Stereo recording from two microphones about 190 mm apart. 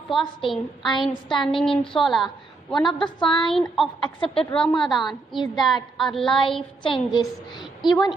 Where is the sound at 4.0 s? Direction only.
25° left (ahead or behind).